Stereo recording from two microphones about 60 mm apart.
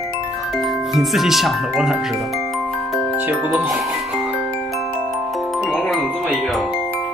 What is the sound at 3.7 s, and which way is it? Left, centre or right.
Music, centre.